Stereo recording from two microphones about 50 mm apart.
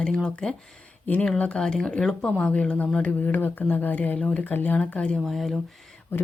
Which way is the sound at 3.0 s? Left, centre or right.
Left.